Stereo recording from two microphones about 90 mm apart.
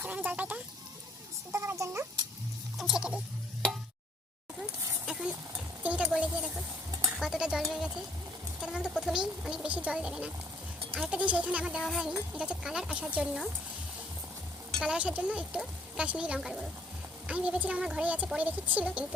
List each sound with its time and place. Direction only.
0.0 s speech: 20° right (ahead or behind)
1.5 s speech: 30° right (ahead or behind)
2.7 s speech: 5° right (ahead or behind)
5.8 s a sound: 15° right (ahead or behind)
6.1 s speech: 10° right (ahead or behind)
14.8 s speech: 10° right (ahead or behind)
16.4 s speech: 5° right (ahead or behind)
17.2 s speech: 15° right (ahead or behind)